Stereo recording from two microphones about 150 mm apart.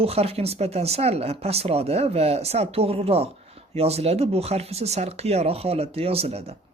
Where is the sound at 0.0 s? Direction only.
40° right (ahead or behind).